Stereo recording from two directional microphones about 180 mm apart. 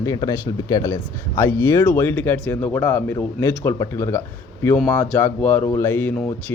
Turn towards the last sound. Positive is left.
turn(degrees=10)  # may be behind; listen again after turning